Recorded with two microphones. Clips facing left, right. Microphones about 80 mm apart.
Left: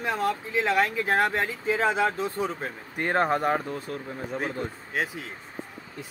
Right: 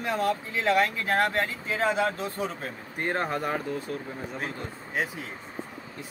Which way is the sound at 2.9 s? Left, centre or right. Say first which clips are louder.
Left 5 dB; left.